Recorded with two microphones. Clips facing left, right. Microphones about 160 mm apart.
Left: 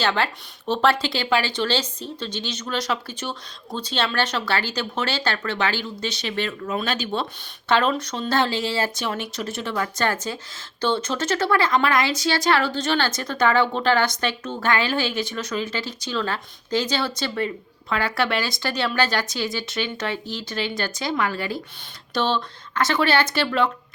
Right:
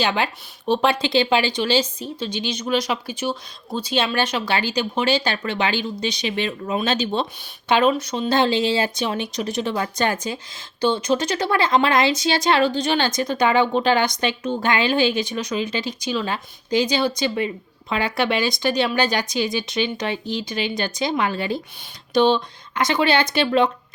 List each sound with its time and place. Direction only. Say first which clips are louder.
0.0 s speech: right 1 dB; 15° right (ahead or behind)
7.7 s speech: right 3 dB; 10° right (ahead or behind)